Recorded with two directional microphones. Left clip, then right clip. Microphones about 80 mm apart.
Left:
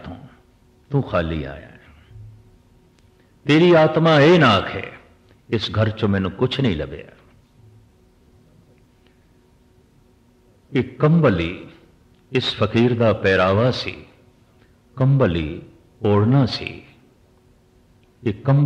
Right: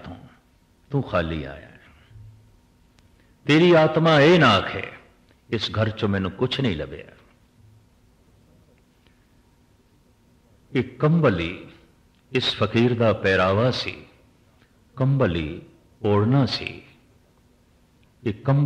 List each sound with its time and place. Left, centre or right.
0.0 s a sound: right
0.8 s a man's voice: right
3.4 s a man's voice: right
10.7 s a man's voice: right
18.2 s a man's voice: right